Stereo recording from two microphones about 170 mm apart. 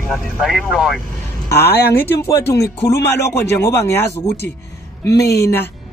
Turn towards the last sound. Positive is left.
turn(degrees=15)  # may be behind; listen again after turning